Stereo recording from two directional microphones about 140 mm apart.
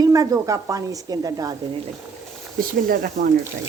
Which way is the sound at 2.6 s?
90° right.